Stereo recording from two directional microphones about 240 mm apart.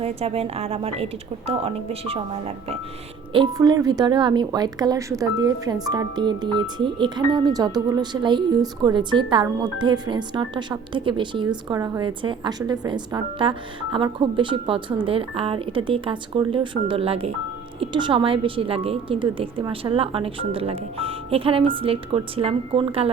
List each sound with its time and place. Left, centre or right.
0.0 s a woman's voice: right